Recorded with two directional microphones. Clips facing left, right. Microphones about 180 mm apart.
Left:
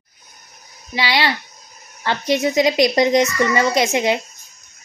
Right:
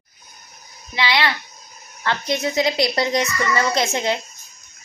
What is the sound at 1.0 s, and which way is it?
Speech, 35° left (ahead or behind).